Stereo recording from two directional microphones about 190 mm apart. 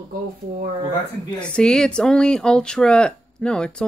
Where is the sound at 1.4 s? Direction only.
5° left (ahead or behind).